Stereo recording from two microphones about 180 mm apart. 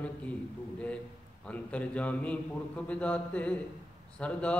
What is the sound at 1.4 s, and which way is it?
A man's voice, 5° left (ahead or behind).